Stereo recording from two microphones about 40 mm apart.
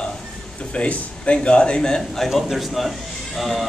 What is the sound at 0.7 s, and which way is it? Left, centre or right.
A man's voice, left.